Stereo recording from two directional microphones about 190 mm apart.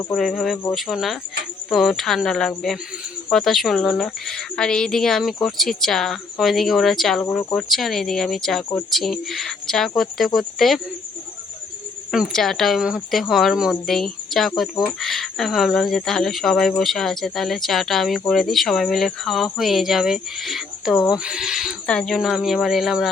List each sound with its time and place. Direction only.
0.1 s speech: centre (ahead or behind)
12.1 s speech: centre (ahead or behind)